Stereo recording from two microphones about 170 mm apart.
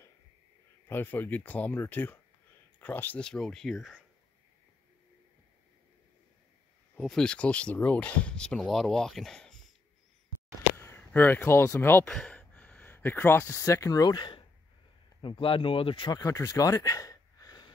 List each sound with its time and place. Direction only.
0.8 s speech: 10° left (ahead or behind)
7.0 s speech: 5° left (ahead or behind)
10.8 s speech: 15° left (ahead or behind)